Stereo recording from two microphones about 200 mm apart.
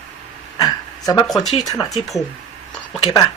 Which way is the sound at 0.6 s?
20° left (ahead or behind).